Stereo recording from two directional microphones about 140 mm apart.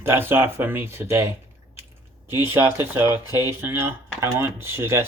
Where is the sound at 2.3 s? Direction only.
15° right (ahead or behind).